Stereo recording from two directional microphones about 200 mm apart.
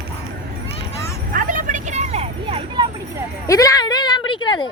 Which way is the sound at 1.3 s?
40° right (ahead or behind).